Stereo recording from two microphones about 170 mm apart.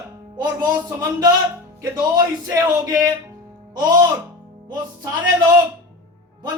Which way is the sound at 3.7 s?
25° right (ahead or behind).